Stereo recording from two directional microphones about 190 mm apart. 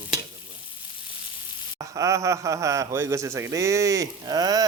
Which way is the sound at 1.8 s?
15° right (ahead or behind).